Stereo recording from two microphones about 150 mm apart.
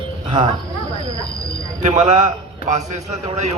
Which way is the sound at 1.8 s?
55° right (ahead or behind).